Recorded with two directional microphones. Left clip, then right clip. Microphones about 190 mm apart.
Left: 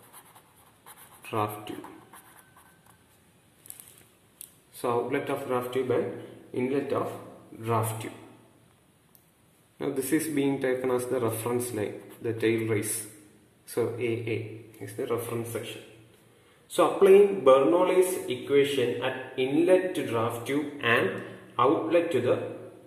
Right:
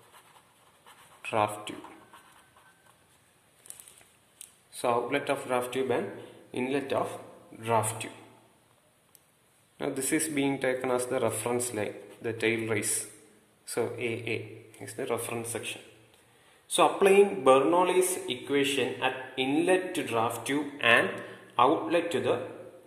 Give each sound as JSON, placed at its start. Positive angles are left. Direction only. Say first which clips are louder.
{"t": 1.2, "sound": "a sound", "louder": "right 2 dB", "side_deg": -30}
{"t": 4.7, "sound": "a man's voice", "louder": "even", "side_deg": -30}
{"t": 9.8, "sound": "a man's voice", "louder": "left 2 dB", "side_deg": -25}
{"t": 16.7, "sound": "a man's voice", "louder": "left 2 dB", "side_deg": -40}